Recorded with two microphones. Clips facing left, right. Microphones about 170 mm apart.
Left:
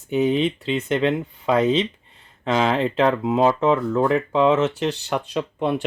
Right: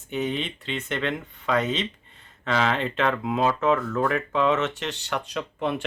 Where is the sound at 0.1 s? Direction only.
35° left (ahead or behind).